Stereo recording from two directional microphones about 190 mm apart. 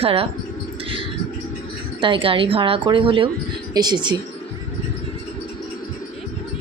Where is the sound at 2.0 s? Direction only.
25° right (ahead or behind).